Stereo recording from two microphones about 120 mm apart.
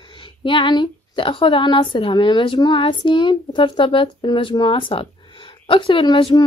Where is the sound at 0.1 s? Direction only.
45° left (ahead or behind).